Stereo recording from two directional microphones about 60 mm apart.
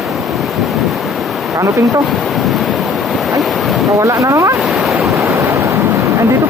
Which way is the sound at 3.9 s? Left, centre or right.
Right.